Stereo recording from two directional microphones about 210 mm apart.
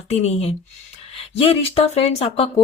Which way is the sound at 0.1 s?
30° left (ahead or behind).